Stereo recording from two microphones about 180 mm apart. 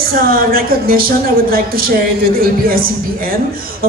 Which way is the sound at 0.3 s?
55° right (ahead or behind).